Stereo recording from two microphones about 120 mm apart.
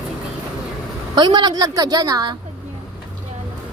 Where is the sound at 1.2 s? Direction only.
35° right (ahead or behind).